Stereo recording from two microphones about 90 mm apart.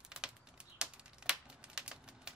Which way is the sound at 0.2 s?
10° right (ahead or behind).